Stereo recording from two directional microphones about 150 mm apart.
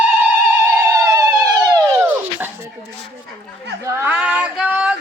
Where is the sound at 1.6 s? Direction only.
25° right (ahead or behind).